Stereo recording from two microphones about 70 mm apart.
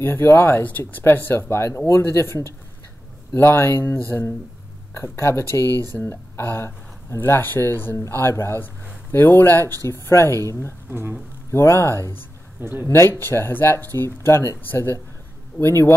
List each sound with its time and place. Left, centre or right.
0.0 s speech: left
0.7 s speech: left
10.9 s speech: right
11.5 s speech: left
12.5 s speech: right
12.8 s speech: left